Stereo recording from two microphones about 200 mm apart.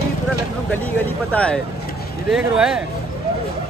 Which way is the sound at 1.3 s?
5° left (ahead or behind).